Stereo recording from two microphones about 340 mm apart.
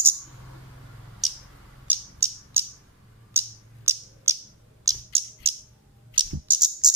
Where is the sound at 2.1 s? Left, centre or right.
Centre.